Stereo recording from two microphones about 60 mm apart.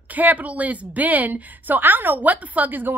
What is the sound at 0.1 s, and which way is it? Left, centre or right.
A woman's voice, right.